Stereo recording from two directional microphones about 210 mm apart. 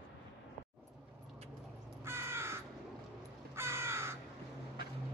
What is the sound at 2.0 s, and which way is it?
Crow, 10° right (ahead or behind).